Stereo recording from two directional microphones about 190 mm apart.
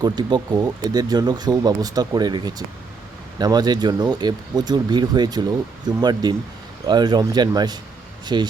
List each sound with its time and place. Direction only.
0.0 s speech: 20° right (ahead or behind)